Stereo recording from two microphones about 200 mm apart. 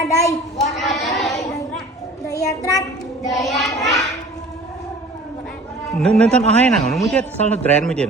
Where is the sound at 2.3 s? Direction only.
15° left (ahead or behind).